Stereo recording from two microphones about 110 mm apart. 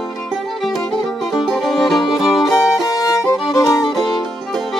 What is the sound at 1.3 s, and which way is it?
Music, centre (ahead or behind).